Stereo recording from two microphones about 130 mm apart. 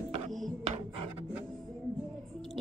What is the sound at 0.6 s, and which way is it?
Music, 50° right (ahead or behind).